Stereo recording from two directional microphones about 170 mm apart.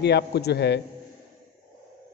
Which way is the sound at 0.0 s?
75° left (ahead or behind).